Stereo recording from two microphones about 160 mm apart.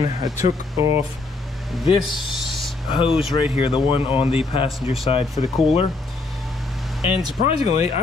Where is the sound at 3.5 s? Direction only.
35° left (ahead or behind).